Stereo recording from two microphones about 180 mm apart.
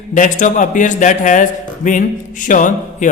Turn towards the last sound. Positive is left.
turn(degrees=45)  # may be behind; listen again after turning